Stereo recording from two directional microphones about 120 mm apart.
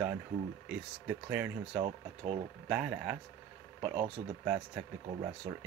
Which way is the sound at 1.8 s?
65° right (ahead or behind).